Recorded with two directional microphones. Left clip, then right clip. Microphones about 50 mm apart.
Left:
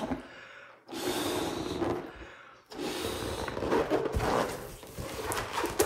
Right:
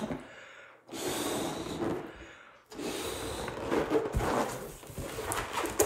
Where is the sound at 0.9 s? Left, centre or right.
Left.